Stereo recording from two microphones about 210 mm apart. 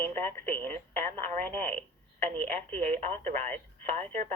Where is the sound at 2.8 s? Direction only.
35° right (ahead or behind).